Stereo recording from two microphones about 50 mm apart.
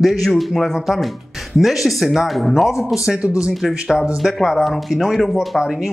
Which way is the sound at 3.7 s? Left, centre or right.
Centre.